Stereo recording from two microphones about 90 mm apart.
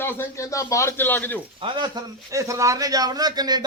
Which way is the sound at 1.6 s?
60° right (ahead or behind).